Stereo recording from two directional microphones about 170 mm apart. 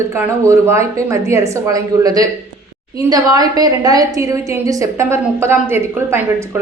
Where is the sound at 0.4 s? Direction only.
15° right (ahead or behind).